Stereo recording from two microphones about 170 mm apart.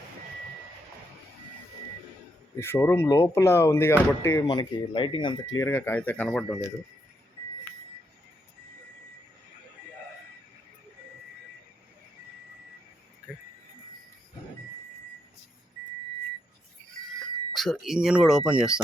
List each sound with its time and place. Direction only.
2.6 s speech: 15° left (ahead or behind)
17.2 s speech: centre (ahead or behind)